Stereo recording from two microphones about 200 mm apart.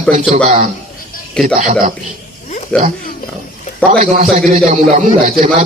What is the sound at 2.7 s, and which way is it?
Speech, 5° left (ahead or behind).